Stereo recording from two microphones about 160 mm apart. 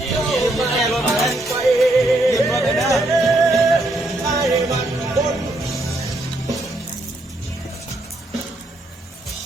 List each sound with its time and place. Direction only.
0.0 s a sound: centre (ahead or behind)
1.4 s music: centre (ahead or behind)
4.5 s music: 20° right (ahead or behind)